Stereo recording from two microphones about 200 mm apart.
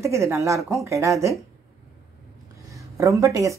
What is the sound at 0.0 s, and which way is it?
Speech, 15° right (ahead or behind).